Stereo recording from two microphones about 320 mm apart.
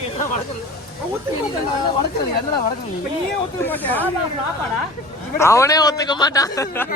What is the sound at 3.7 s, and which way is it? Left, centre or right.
Speech, centre.